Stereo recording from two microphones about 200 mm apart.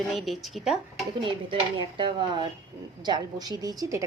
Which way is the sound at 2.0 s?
25° right (ahead or behind).